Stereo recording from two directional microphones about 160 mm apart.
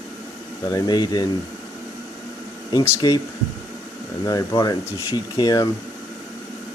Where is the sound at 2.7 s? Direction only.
25° left (ahead or behind).